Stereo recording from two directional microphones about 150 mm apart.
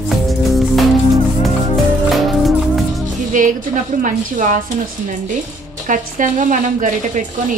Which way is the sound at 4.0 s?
60° right (ahead or behind).